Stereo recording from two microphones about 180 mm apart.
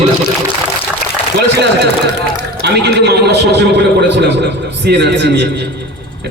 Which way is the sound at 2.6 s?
70° right (ahead or behind).